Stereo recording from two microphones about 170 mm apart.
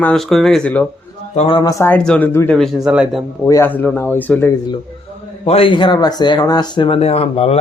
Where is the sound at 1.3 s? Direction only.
40° left (ahead or behind).